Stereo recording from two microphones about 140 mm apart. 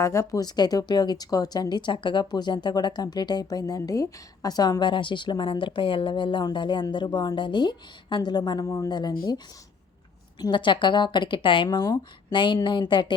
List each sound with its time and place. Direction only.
0.0 s speech: 20° left (ahead or behind)
10.3 s speech: 30° left (ahead or behind)